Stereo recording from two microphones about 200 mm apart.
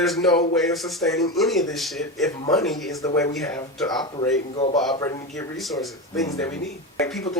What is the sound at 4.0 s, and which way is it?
A man's voice, 20° left (ahead or behind).